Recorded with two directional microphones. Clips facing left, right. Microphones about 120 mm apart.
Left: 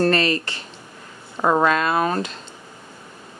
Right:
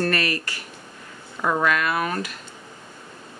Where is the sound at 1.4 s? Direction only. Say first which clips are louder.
Left 5 dB; 45° left (ahead or behind).